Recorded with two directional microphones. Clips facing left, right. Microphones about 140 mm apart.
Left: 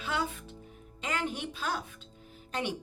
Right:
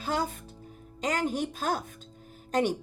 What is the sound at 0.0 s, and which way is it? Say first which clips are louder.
Speech: right 3 dB; 40° right (ahead or behind).